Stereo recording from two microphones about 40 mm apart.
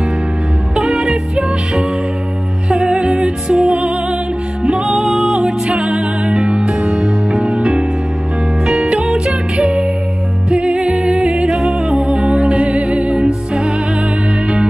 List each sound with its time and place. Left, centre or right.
0.8 s music: right
3.7 s music: right
4.6 s music: centre
5.7 s music: right; by 12.0 s centre
12.0 s music: right